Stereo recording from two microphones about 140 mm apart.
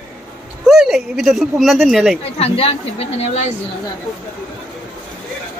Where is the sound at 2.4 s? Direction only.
45° left (ahead or behind).